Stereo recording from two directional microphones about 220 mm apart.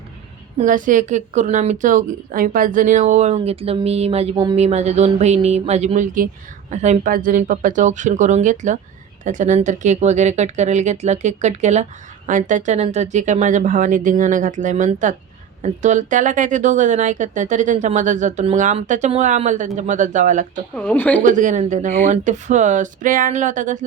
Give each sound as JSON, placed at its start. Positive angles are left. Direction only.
{"t": 0.6, "sound": "speech", "side_deg": -35}
{"t": 20.7, "sound": "speech", "side_deg": 5}
{"t": 21.2, "sound": "speech", "side_deg": -35}